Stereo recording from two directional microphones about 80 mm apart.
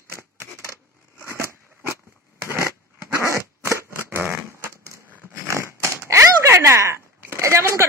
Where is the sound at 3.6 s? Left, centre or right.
Right.